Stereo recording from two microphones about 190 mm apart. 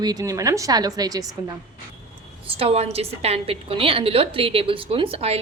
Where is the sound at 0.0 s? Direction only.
20° right (ahead or behind).